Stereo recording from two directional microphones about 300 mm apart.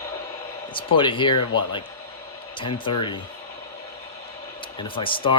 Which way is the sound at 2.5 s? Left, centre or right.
Centre.